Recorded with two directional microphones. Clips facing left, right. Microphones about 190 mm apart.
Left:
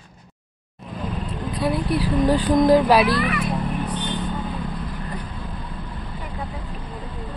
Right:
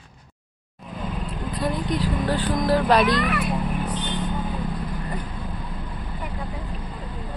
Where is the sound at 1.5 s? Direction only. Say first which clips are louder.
Left 3 dB; 5° left (ahead or behind).